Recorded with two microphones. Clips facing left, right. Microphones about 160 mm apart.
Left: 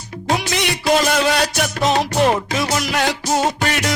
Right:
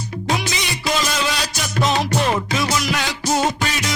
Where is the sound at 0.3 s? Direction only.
60° left (ahead or behind).